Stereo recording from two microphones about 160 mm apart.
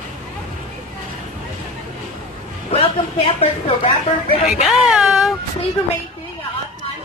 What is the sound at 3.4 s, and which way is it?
A woman's voice, 35° left (ahead or behind).